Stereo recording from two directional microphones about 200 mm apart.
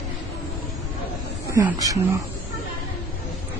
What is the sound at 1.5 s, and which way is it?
Speech, 15° right (ahead or behind).